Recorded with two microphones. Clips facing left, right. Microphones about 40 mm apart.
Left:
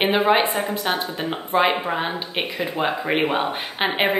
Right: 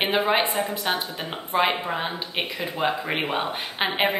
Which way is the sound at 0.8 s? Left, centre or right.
Centre.